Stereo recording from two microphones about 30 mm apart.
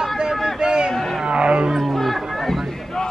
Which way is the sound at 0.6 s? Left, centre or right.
Right.